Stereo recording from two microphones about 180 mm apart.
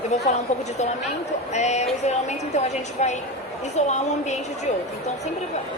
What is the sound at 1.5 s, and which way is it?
A woman's voice, 40° left (ahead or behind).